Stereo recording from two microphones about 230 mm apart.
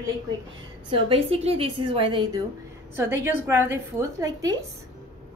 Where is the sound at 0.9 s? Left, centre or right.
Right.